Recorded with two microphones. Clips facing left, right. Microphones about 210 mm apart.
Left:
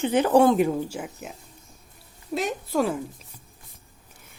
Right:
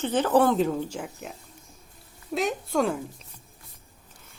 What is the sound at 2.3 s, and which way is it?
Speech, centre (ahead or behind).